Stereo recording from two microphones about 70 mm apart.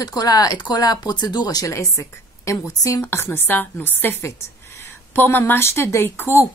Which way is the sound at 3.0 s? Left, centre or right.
Left.